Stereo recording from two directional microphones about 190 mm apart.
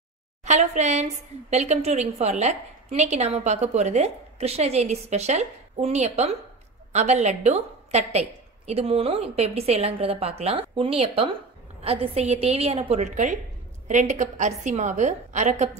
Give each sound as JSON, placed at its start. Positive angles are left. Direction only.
{"t": 0.5, "sound": "a woman's voice", "side_deg": -35}